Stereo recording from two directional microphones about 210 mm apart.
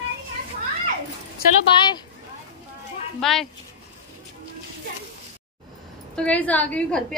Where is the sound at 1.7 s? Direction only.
25° left (ahead or behind).